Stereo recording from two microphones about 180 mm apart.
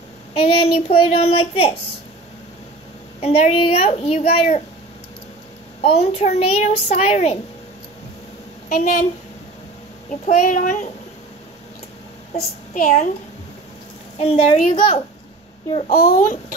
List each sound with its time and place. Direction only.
0.3 s a child's voice: 30° left (ahead or behind)
3.2 s a child's voice: 35° left (ahead or behind)
5.8 s a child's voice: 35° left (ahead or behind)
10.2 s a child's voice: 45° left (ahead or behind)
12.4 s a child's voice: 45° left (ahead or behind)
14.2 s a child's voice: 35° left (ahead or behind)
15.9 s a child's voice: 55° left (ahead or behind)